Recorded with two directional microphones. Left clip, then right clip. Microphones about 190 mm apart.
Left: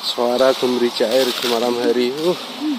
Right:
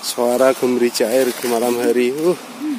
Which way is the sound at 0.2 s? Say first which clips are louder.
Right 1 dB; 30° right (ahead or behind).